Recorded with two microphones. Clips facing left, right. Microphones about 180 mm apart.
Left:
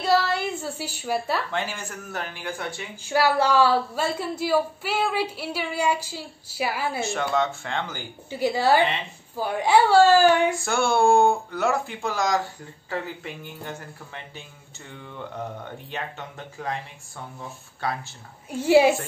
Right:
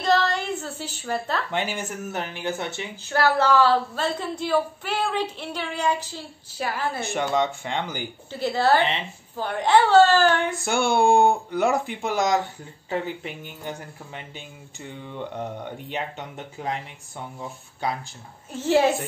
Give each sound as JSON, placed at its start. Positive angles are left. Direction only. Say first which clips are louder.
{"t": 0.0, "sound": "a sound", "louder": "even", "side_deg": 10}
{"t": 1.5, "sound": "speech", "louder": "right 2 dB", "side_deg": -20}
{"t": 3.1, "sound": "a woman's voice", "louder": "even", "side_deg": 10}
{"t": 7.1, "sound": "speech", "louder": "right 2 dB", "side_deg": -15}
{"t": 8.3, "sound": "a woman's voice", "louder": "even", "side_deg": 10}
{"t": 10.6, "sound": "speech", "louder": "even", "side_deg": -20}
{"t": 18.5, "sound": "a woman's voice", "louder": "left 3 dB", "side_deg": 10}